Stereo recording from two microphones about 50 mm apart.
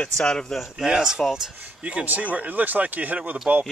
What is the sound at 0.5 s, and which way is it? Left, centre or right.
Speech, centre.